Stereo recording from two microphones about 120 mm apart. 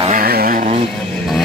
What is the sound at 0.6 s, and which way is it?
Vehicle, 65° right (ahead or behind).